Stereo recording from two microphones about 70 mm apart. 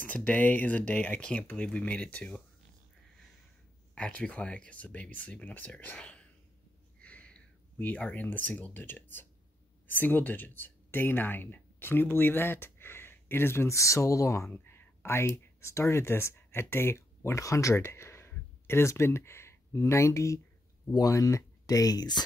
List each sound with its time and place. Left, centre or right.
0.0 s speech: left
3.9 s speech: centre
7.0 s a sound: centre
9.8 s speech: left
14.5 s speech: left
20.9 s speech: left